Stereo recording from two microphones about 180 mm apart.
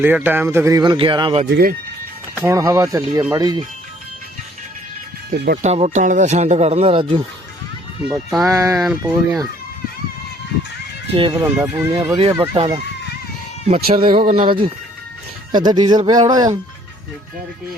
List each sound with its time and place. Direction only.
0.0 s speech: 10° right (ahead or behind); by 1.4 s 25° right (ahead or behind)
1.5 s speech: 65° right (ahead or behind)
2.4 s speech: 15° right (ahead or behind)
5.3 s speech: 50° right (ahead or behind)
5.6 s speech: 40° right (ahead or behind)
8.4 s speech: 15° right (ahead or behind)
8.8 s speech: 5° right (ahead or behind)
11.1 s speech: 30° right (ahead or behind)
11.3 s speech: 10° right (ahead or behind)
12.1 s speech: 25° right (ahead or behind)